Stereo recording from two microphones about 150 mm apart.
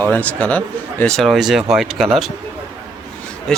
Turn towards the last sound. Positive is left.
turn(degrees=5)  # may be behind; listen again after turning